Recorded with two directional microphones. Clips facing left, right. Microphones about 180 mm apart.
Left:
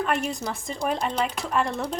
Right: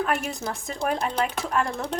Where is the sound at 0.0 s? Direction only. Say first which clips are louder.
Even; 5° right (ahead or behind).